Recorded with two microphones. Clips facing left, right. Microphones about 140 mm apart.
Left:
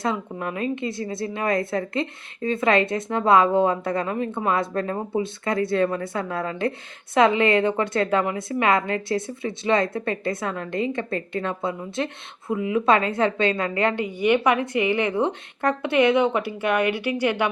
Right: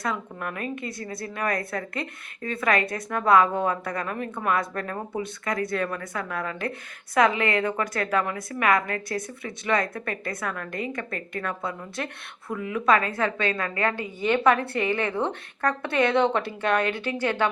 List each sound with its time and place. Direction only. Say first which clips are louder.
0.0 s a woman's voice: left 4 dB; 25° left (ahead or behind)